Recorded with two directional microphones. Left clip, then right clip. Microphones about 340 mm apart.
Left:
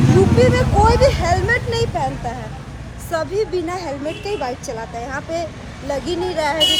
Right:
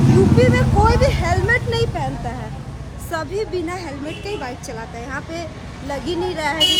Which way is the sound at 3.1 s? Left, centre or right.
Centre.